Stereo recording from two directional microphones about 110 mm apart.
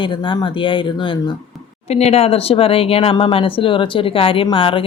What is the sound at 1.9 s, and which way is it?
Speech, 70° left (ahead or behind).